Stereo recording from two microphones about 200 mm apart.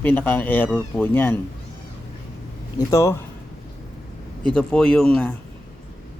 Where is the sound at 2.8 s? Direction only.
15° left (ahead or behind).